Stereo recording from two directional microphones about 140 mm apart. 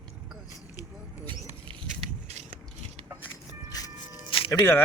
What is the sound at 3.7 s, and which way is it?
Music, 25° left (ahead or behind).